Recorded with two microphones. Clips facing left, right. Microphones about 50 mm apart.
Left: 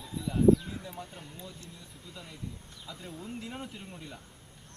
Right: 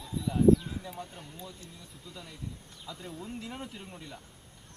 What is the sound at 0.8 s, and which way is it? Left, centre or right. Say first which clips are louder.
Speech: right 1 dB; centre.